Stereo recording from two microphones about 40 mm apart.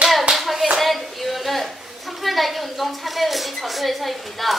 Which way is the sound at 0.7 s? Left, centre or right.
Centre.